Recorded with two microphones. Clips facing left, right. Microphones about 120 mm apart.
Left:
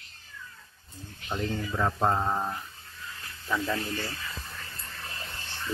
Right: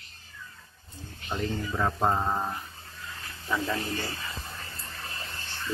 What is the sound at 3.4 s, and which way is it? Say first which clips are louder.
Speech: even; 20° right (ahead or behind).